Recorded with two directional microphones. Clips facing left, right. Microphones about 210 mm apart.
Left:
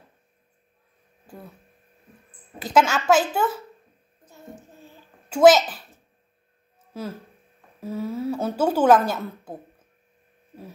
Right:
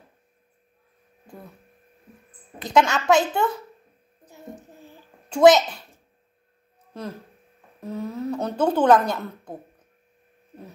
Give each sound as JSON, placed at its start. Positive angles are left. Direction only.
{"t": 2.6, "sound": "speech", "side_deg": 5}
{"t": 4.3, "sound": "music", "side_deg": -15}
{"t": 5.3, "sound": "a child's voice", "side_deg": 5}
{"t": 6.9, "sound": "a woman's voice", "side_deg": 5}